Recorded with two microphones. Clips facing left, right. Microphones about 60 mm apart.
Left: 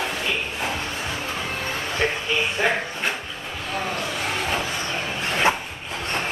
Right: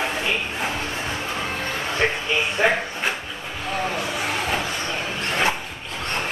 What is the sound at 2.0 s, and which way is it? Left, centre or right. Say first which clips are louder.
Speech: right 2 dB; right.